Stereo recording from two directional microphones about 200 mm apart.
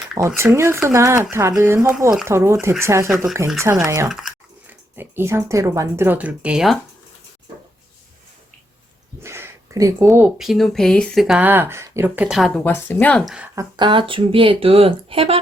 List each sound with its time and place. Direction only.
0.2 s speech: 15° right (ahead or behind)
4.1 s speech: centre (ahead or behind)
9.2 s a sound: 15° right (ahead or behind)
10.1 s speech: 5° right (ahead or behind)
13.6 s speech: 20° right (ahead or behind)